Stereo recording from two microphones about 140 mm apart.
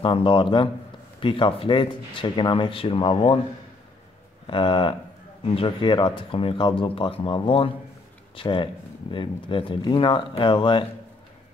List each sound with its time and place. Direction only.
0.0 s speech: 40° left (ahead or behind)
4.5 s speech: 35° left (ahead or behind)